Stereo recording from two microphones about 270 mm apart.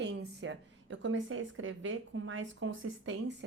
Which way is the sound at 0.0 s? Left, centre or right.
Right.